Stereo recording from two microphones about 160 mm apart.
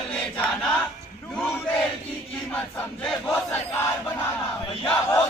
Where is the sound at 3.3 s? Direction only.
15° left (ahead or behind).